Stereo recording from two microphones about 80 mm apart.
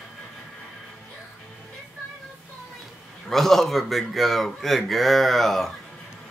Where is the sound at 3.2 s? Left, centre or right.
Centre.